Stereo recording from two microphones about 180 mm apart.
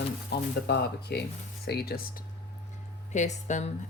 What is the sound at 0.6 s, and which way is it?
Speech, 65° left (ahead or behind).